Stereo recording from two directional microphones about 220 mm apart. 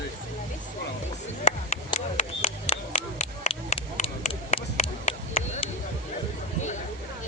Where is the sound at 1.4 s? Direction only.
30° left (ahead or behind).